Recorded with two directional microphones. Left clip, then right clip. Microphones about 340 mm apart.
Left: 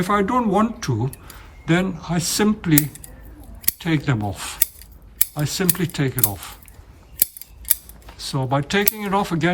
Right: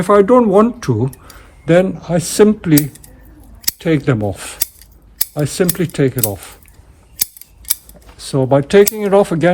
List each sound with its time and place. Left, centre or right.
0.0 s speech: centre
8.1 s speech: centre